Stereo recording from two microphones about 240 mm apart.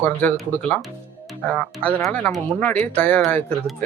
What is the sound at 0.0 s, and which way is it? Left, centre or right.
Speech, centre.